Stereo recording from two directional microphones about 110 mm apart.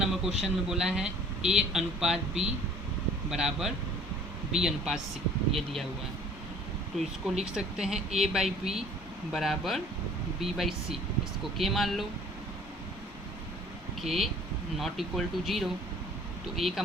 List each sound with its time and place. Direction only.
0.0 s a sound: 5° right (ahead or behind)
0.4 s speech: 5° right (ahead or behind)
2.1 s speech: 75° right (ahead or behind)
3.2 s speech: 5° right (ahead or behind)
7.5 s speech: 5° right (ahead or behind)
14.0 s speech: centre (ahead or behind)